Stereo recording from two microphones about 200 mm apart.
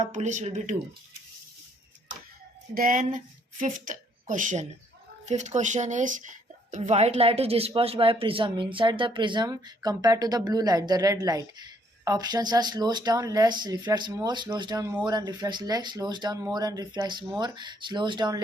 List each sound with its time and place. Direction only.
0.0 s speech: 35° right (ahead or behind)
2.7 s a woman's voice: 45° right (ahead or behind); by 18.4 s 20° right (ahead or behind)